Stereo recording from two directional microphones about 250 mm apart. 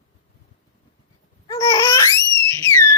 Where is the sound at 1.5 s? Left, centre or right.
Centre.